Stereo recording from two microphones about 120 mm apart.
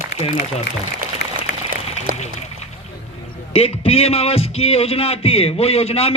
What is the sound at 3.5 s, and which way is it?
A man's voice, 55° left (ahead or behind).